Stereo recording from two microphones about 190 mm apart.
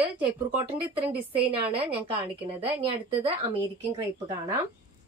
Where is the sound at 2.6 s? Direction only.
30° right (ahead or behind).